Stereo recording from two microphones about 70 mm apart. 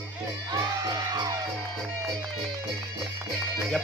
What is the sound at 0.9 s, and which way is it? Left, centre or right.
Music, right.